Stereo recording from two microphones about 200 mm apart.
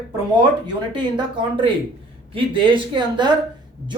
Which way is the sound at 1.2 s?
25° right (ahead or behind).